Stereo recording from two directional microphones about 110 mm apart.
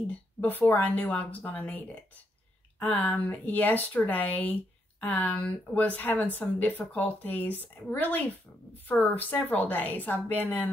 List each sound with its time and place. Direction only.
0.1 s speech: 15° left (ahead or behind)